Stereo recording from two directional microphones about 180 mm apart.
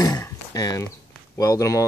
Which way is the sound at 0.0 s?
20° left (ahead or behind).